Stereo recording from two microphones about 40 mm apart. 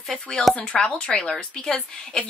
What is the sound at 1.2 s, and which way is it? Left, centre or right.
Speech, centre.